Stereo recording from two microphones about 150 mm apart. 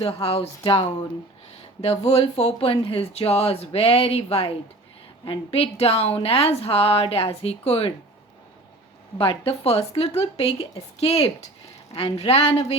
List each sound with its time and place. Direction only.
0.0 s speech: 40° left (ahead or behind)
1.8 s speech: 45° left (ahead or behind)
9.1 s speech: 35° left (ahead or behind)